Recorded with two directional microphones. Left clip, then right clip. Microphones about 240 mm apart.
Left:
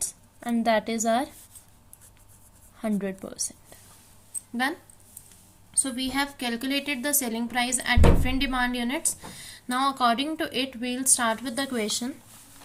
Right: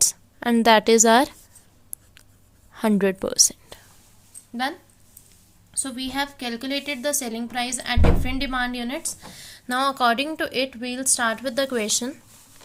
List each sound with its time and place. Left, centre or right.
0.0 s a woman's voice: right
2.7 s a woman's voice: right
5.7 s a woman's voice: centre; by 12.1 s right